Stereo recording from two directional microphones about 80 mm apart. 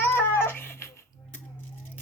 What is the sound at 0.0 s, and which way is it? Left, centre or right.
Baby cry, left.